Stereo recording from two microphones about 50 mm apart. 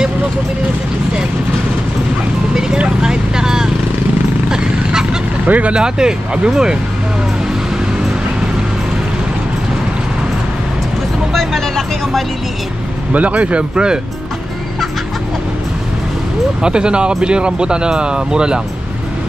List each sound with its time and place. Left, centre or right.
3.0 s vehicle: centre
5.5 s speech: right
11.3 s music: centre
13.1 s speech: right
16.6 s speech: centre